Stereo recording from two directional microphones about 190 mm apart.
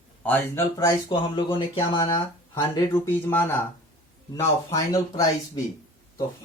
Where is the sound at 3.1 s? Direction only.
10° left (ahead or behind).